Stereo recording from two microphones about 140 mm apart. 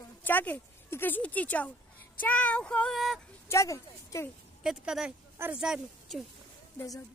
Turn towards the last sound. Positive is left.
turn(degrees=-5)  # may be behind; listen again after turning